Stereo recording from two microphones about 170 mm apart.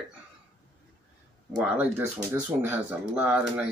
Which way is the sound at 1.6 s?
10° right (ahead or behind).